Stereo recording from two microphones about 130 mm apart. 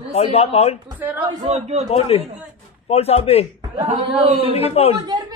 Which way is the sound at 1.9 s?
50° left (ahead or behind).